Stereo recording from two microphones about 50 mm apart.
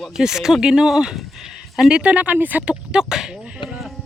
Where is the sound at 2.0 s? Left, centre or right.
Right.